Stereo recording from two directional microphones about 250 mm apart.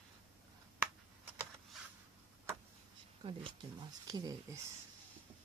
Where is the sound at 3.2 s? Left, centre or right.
Centre.